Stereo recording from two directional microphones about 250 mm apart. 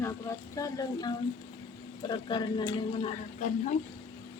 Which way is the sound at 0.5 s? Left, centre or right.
Centre.